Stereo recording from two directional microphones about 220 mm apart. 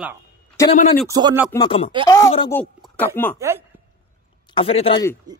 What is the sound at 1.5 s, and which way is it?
Speech, 20° left (ahead or behind).